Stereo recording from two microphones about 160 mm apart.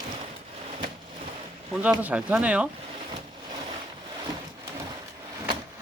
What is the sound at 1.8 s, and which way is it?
Speech, 10° right (ahead or behind).